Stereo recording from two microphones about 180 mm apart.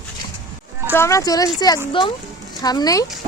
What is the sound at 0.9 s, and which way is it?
Speech, 15° left (ahead or behind).